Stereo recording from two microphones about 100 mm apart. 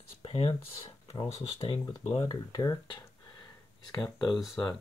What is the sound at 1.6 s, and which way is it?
Speech, 75° left (ahead or behind).